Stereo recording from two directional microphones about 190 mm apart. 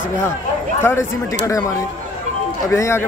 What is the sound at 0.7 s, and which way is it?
Speech, 15° left (ahead or behind).